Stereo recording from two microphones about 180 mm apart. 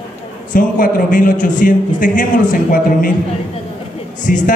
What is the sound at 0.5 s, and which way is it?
A man's voice, 50° left (ahead or behind).